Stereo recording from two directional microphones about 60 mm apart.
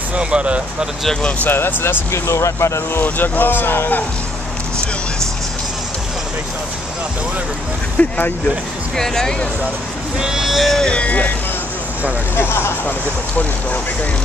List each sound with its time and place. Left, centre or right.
0.1 s speech: centre
1.5 s speech: left
2.1 s speech: left
3.0 s speech: left
8.0 s speech: left
8.9 s speech: centre
10.2 s speech: centre
10.8 s speech: centre
12.4 s speech: left